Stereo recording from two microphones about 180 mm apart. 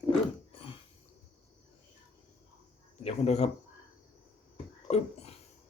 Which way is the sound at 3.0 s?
35° left (ahead or behind).